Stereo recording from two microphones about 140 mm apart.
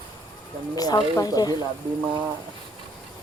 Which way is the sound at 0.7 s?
30° left (ahead or behind).